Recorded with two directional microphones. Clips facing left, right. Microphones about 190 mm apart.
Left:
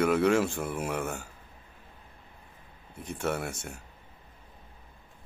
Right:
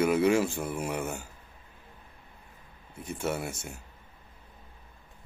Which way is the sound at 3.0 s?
5° right (ahead or behind).